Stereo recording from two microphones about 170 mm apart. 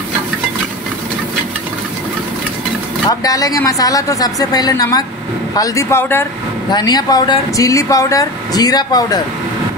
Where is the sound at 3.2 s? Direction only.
20° left (ahead or behind).